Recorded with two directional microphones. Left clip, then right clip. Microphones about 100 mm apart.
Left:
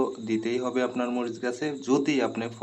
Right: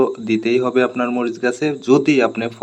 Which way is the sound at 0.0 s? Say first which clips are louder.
Right 10 dB; 40° right (ahead or behind).